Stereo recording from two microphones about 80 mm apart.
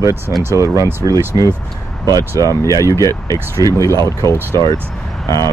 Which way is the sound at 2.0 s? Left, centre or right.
Right.